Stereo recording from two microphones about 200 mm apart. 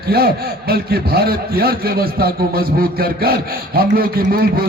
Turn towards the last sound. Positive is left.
turn(degrees=-50)  # may be behind; listen again after turning